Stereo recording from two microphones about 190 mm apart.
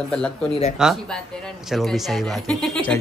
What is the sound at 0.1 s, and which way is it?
A man's voice, 5° left (ahead or behind).